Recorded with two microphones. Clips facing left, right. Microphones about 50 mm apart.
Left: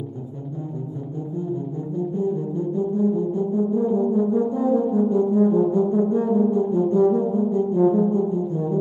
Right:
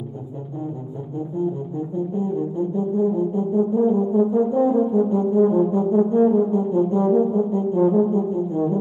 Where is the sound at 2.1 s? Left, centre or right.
Right.